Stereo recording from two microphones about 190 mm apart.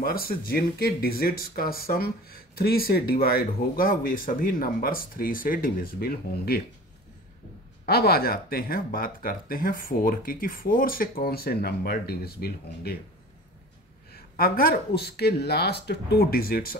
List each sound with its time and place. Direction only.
0.0 s speech: 50° left (ahead or behind)
7.8 s speech: 55° left (ahead or behind)
14.1 s speech: 50° left (ahead or behind)